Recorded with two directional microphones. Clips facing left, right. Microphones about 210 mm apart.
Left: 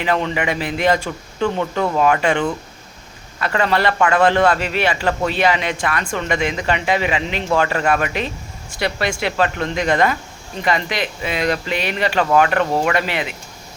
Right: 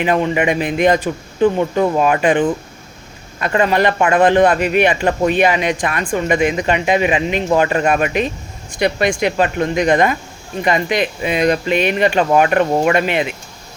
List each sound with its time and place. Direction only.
0.0 s speech: 20° right (ahead or behind)